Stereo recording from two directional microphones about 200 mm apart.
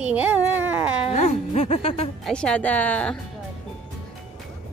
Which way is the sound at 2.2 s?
5° left (ahead or behind).